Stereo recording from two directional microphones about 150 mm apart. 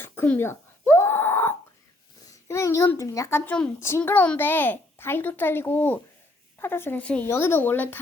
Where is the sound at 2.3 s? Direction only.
20° left (ahead or behind).